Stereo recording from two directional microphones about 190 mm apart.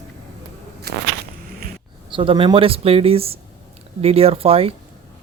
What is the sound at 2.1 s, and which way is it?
Speech, 25° right (ahead or behind).